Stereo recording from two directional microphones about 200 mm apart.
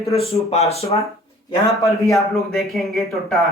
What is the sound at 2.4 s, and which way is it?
Speech, centre (ahead or behind).